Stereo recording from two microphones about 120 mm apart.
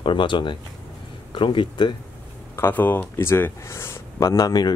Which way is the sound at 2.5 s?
20° left (ahead or behind).